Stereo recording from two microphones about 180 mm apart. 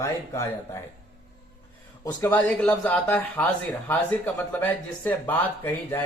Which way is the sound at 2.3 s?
10° left (ahead or behind).